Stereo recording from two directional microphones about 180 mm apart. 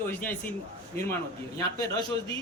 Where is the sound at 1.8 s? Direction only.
15° left (ahead or behind).